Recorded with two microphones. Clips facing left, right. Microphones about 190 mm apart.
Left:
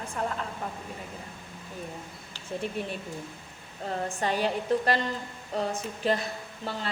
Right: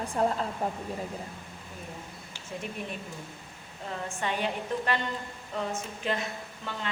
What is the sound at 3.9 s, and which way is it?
Speech, 35° left (ahead or behind).